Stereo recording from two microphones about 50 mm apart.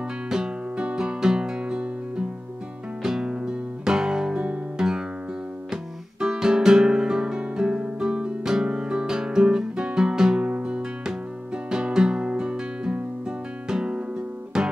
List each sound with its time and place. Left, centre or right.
0.3 s music: centre
5.7 s guitar: centre
10.5 s music: right